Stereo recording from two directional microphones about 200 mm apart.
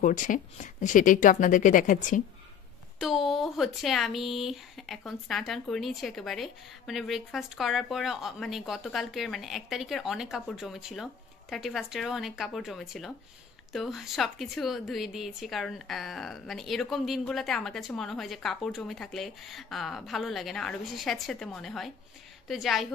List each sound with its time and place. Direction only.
0.0 s speech: 40° left (ahead or behind)
3.0 s speech: centre (ahead or behind)